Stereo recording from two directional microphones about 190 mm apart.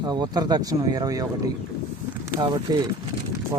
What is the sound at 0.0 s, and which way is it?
Speech, 20° right (ahead or behind).